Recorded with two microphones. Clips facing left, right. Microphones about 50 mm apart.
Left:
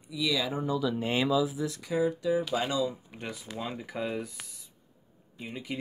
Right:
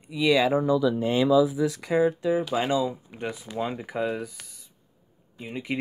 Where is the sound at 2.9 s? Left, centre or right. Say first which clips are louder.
Right 6 dB; centre.